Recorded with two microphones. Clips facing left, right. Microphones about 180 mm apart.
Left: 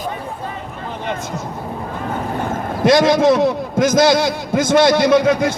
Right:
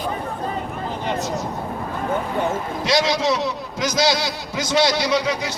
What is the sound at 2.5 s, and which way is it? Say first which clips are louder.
A man's voice: left 7 dB; 50° left (ahead or behind).